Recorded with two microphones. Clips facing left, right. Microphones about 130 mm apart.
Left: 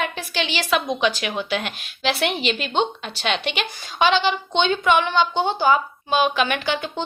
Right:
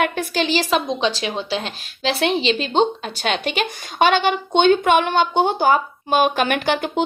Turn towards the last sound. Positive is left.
turn(degrees=-50)  # may be behind; listen again after turning